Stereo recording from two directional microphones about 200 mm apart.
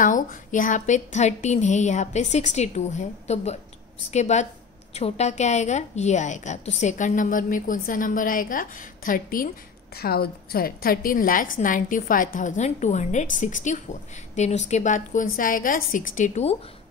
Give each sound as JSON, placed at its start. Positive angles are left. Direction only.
{"t": 0.0, "sound": "a woman's voice", "side_deg": 40}